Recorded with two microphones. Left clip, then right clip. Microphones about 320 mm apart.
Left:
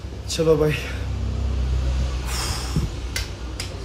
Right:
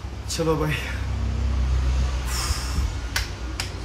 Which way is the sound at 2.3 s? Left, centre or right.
Centre.